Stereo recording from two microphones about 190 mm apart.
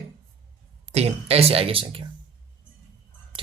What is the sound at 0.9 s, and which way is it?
Speech, 30° right (ahead or behind).